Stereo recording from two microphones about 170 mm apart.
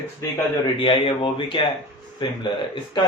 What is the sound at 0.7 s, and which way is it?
A man's voice, 30° left (ahead or behind).